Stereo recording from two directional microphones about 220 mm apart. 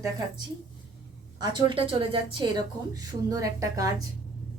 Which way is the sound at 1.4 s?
20° right (ahead or behind).